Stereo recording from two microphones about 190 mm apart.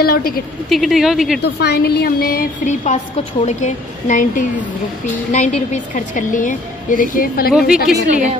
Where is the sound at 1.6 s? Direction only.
55° left (ahead or behind).